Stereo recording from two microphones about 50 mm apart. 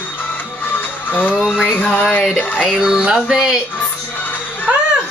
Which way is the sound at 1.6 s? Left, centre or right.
Left.